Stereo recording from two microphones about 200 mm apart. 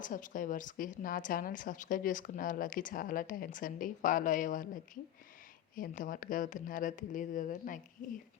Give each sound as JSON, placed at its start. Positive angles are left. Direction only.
{"t": 0.0, "sound": "a woman's voice", "side_deg": 40}